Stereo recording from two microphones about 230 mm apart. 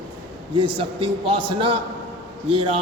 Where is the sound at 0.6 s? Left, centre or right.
Right.